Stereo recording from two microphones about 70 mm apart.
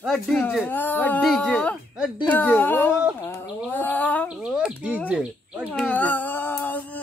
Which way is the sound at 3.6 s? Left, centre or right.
Left.